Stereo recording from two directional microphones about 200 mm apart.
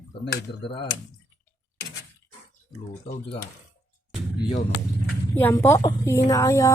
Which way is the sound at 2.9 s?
30° left (ahead or behind).